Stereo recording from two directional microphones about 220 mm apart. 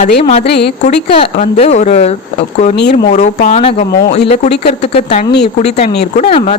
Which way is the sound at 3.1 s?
35° left (ahead or behind).